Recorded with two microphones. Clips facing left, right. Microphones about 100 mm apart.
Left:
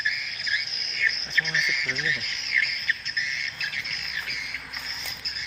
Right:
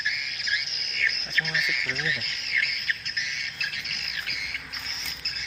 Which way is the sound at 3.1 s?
60° right (ahead or behind).